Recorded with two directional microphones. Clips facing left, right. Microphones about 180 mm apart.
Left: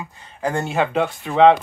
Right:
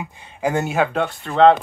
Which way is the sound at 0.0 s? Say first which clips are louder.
Right 2 dB; 15° right (ahead or behind).